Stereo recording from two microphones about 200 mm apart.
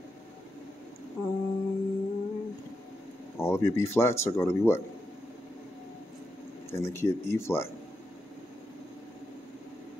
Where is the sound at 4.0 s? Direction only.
15° left (ahead or behind).